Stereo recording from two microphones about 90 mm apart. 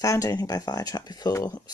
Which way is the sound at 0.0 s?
40° left (ahead or behind).